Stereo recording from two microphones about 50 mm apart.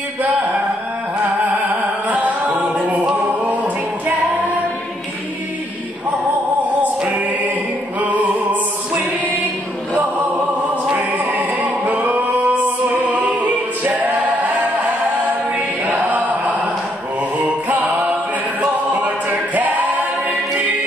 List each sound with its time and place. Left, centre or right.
2.0 s a capella: right
7.2 s music: right
10.9 s music: right
15.8 s chant: right
17.4 s music: right
18.6 s a capella: right